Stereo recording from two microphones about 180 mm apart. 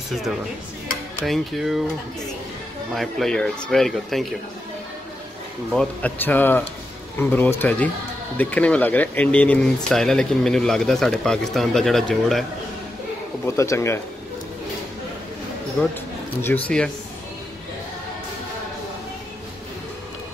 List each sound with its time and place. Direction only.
1.2 s speech: centre (ahead or behind)
2.9 s speech: centre (ahead or behind)
5.7 s speech: 5° left (ahead or behind)
13.6 s speech: 15° left (ahead or behind)
15.8 s speech: 5° left (ahead or behind)